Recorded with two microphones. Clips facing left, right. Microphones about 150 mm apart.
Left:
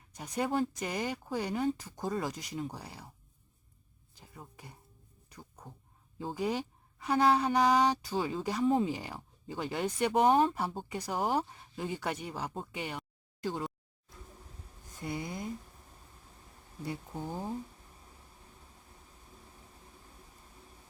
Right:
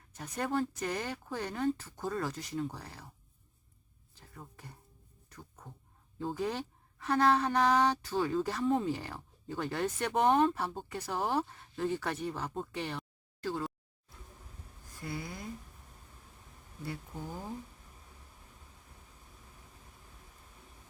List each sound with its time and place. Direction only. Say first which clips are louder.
0.1 s a woman's voice: left 2 dB; 10° left (ahead or behind)
4.1 s speech: even; 15° left (ahead or behind)
5.3 s a sound: left 1 dB; 10° left (ahead or behind)
6.1 s a woman's voice: left 1 dB; 10° left (ahead or behind)
14.9 s speech: left 3 dB; 20° left (ahead or behind)
16.8 s speech: left 3 dB; 20° left (ahead or behind)